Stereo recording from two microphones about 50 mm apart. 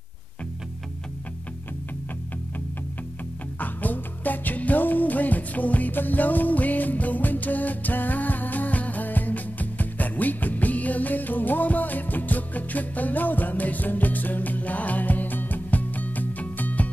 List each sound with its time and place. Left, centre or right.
3.5 s music: left